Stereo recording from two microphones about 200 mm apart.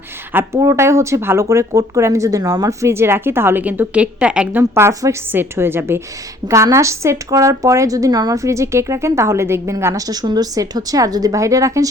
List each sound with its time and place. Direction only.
0.3 s speech: 15° right (ahead or behind)